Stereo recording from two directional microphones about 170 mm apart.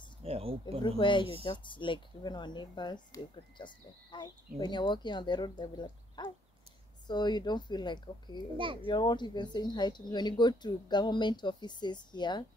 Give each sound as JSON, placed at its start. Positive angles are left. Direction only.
{"t": 0.2, "sound": "speech", "side_deg": -35}
{"t": 0.8, "sound": "speech", "side_deg": 30}